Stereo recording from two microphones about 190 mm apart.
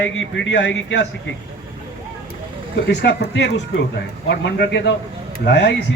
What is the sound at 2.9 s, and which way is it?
Speech, 65° left (ahead or behind).